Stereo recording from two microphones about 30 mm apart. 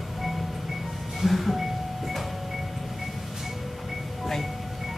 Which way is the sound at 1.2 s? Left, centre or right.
Centre.